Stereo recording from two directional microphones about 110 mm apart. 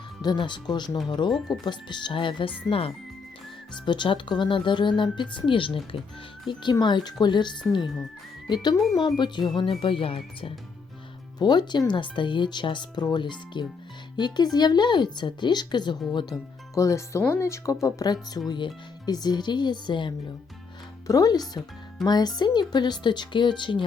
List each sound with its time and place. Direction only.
0.2 s speech: 45° left (ahead or behind)
3.8 s speech: 45° left (ahead or behind)
11.3 s speech: 40° left (ahead or behind)
16.7 s speech: 30° left (ahead or behind); by 20.1 s 45° left (ahead or behind)
21.1 s speech: 35° left (ahead or behind)